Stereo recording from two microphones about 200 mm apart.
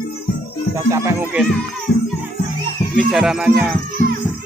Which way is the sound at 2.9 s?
Centre (ahead or behind).